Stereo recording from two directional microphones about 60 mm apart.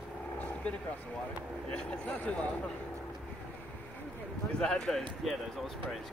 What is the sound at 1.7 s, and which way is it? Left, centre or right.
Speech, centre.